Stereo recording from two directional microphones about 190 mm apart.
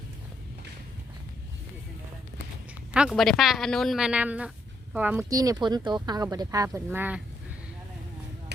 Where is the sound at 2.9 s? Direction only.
5° right (ahead or behind).